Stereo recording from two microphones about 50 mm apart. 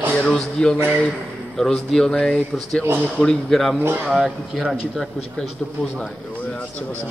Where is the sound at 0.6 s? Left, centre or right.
Centre.